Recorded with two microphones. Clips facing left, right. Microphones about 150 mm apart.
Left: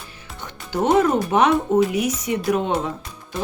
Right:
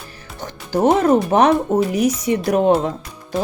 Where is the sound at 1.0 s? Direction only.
40° right (ahead or behind).